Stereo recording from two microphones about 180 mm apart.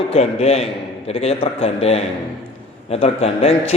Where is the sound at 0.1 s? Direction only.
35° left (ahead or behind).